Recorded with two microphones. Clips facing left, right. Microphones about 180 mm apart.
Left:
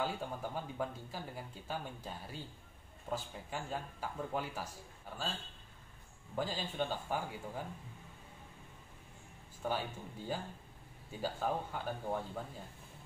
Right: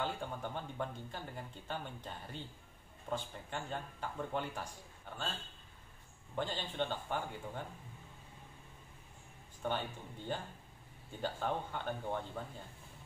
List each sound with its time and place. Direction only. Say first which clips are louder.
0.0 s speech: left 1 dB; 5° left (ahead or behind)
6.3 s speech: left 1 dB; 5° left (ahead or behind)
9.6 s speech: left 1 dB; 5° left (ahead or behind)